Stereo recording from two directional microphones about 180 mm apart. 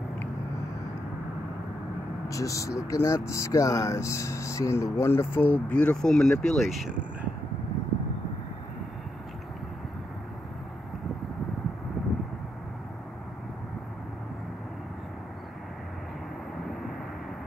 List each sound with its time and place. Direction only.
2.2 s speech: 20° left (ahead or behind); by 7.2 s centre (ahead or behind)